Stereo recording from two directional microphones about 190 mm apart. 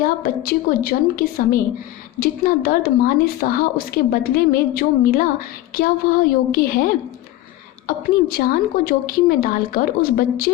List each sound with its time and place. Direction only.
0.0 s speech: 50° left (ahead or behind)